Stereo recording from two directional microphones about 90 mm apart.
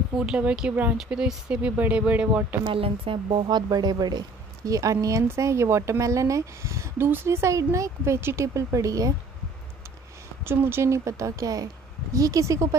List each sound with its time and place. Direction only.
0.1 s speech: 10° right (ahead or behind)
2.6 s speech: 80° right
3.4 s speech: 50° right (ahead or behind)
4.6 s speech: 40° right (ahead or behind)
10.4 s speech: 25° right (ahead or behind)